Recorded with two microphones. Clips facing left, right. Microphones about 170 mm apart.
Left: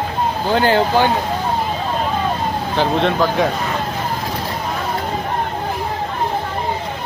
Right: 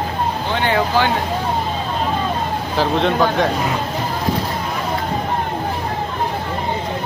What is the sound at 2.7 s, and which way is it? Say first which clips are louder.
Speech: even; centre (ahead or behind).